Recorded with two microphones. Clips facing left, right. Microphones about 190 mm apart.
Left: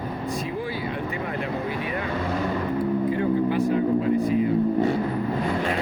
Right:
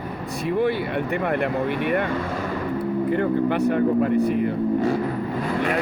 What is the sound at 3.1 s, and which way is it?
Speech, 65° right (ahead or behind).